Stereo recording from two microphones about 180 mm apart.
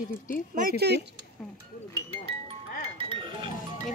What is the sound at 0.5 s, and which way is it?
Speech, 55° right (ahead or behind).